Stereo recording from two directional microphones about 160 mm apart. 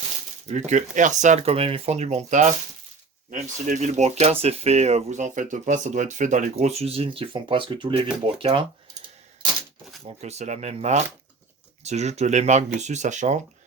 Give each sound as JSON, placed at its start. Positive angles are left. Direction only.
{"t": 0.4, "sound": "speech", "side_deg": -50}
{"t": 10.2, "sound": "speech", "side_deg": -45}